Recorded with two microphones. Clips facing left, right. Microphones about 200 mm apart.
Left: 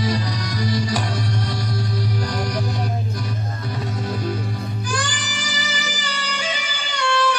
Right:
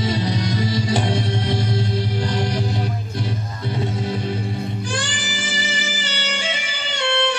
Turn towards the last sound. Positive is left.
turn(degrees=-25)  # may be behind; listen again after turning